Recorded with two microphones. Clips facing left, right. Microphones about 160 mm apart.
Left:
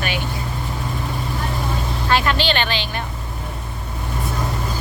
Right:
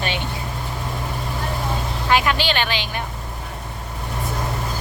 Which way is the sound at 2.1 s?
10° right (ahead or behind).